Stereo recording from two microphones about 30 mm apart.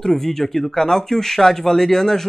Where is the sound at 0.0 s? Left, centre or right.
Centre.